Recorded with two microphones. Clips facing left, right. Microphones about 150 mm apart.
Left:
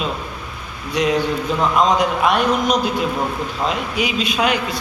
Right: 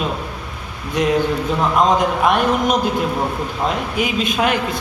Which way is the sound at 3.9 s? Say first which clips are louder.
Right 1 dB; 50° right (ahead or behind).